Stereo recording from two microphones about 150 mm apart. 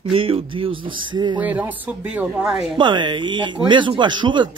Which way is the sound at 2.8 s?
30° right (ahead or behind).